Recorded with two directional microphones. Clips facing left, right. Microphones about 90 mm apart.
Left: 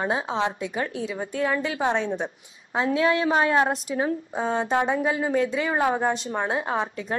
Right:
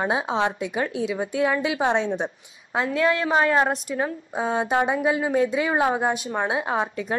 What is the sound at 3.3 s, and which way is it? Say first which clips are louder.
Speech: right 1 dB; 40° right (ahead or behind).